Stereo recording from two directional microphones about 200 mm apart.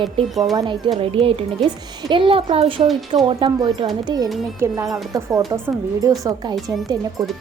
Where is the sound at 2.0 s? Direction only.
25° right (ahead or behind).